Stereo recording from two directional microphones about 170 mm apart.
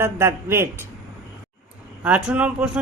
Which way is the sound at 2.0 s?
10° right (ahead or behind).